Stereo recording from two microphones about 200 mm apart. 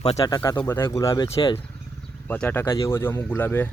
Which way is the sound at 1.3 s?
30° left (ahead or behind).